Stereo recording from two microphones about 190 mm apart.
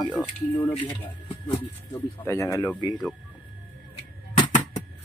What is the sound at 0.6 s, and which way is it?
Speech, 10° left (ahead or behind).